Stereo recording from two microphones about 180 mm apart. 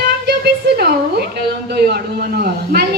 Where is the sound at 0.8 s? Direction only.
60° right (ahead or behind).